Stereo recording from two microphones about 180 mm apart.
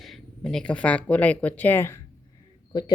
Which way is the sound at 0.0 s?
Centre (ahead or behind).